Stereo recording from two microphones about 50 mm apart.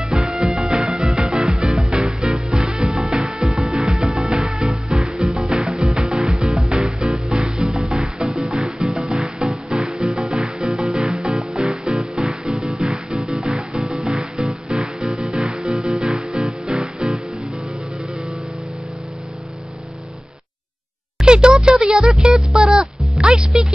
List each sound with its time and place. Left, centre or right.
0.0 s music: centre
14.4 s music: centre
21.2 s a sound: centre
21.7 s music: centre